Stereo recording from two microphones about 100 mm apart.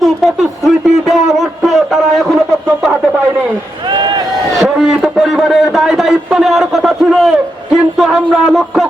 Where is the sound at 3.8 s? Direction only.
50° right (ahead or behind).